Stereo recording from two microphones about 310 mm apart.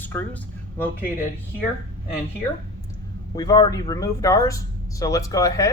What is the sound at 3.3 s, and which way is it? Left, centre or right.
Speech, centre.